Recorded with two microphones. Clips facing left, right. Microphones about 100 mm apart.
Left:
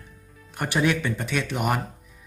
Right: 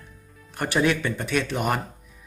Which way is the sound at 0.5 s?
15° left (ahead or behind).